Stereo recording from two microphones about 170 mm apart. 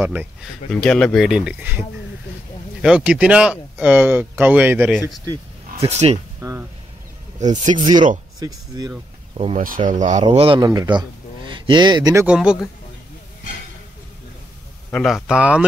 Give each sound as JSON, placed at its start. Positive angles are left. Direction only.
{"t": 0.0, "sound": "speech", "side_deg": -10}
{"t": 0.7, "sound": "speech", "side_deg": 5}
{"t": 5.2, "sound": "a sound", "side_deg": -25}
{"t": 5.9, "sound": "speech", "side_deg": -40}
{"t": 6.4, "sound": "speech", "side_deg": -20}
{"t": 7.7, "sound": "speech", "side_deg": -25}
{"t": 9.6, "sound": "speech", "side_deg": -55}
{"t": 10.2, "sound": "speech", "side_deg": -30}
{"t": 12.3, "sound": "speech", "side_deg": -5}
{"t": 14.9, "sound": "speech", "side_deg": 10}